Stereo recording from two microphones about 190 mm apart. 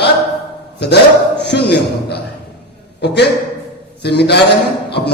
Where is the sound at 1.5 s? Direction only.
60° left (ahead or behind).